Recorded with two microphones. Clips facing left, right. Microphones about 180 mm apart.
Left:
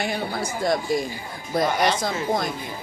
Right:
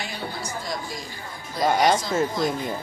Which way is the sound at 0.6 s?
55° left (ahead or behind).